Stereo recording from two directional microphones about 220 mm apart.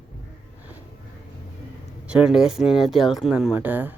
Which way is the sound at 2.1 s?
5° right (ahead or behind).